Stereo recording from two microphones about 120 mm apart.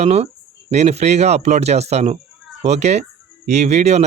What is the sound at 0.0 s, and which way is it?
Speech, 60° right (ahead or behind).